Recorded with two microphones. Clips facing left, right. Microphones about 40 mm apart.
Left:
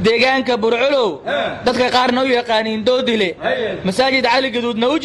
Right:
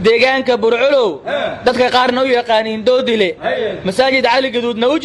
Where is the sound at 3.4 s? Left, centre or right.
Left.